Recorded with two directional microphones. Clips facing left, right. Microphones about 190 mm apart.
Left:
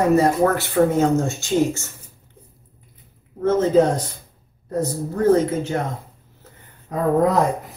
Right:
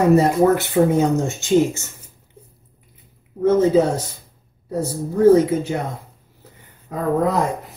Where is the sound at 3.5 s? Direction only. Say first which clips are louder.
Right 1 dB; 5° right (ahead or behind).